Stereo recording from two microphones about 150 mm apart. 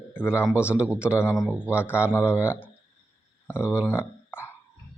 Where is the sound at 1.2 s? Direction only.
15° left (ahead or behind).